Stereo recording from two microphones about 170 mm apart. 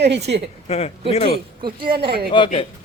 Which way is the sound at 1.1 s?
35° left (ahead or behind).